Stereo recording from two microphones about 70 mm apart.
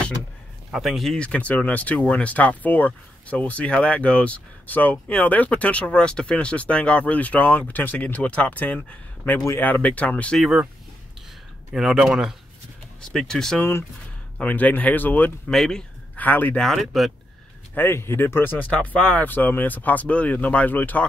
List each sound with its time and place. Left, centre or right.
0.7 s speech: centre
1.1 s speech: centre
11.7 s speech: centre
13.1 s speech: centre
13.6 s speech: left
14.4 s speech: left
15.5 s speech: centre
16.2 s speech: left
16.5 s speech: centre
17.7 s speech: left; by 19.2 s centre
19.2 s speech: left